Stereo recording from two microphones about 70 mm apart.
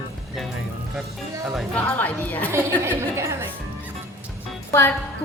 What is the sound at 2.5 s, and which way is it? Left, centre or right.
Speech, right.